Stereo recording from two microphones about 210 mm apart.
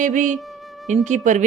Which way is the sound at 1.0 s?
35° right (ahead or behind).